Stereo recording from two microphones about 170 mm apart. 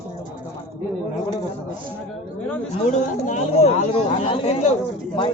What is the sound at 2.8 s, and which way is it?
Speech, 45° left (ahead or behind).